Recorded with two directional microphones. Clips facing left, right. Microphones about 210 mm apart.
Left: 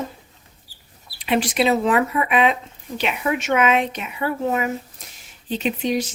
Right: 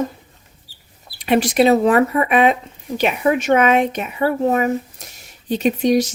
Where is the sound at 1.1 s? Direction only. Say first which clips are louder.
Right 5 dB; 45° right (ahead or behind).